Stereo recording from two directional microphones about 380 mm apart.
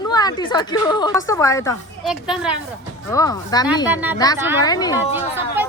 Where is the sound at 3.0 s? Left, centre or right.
Centre.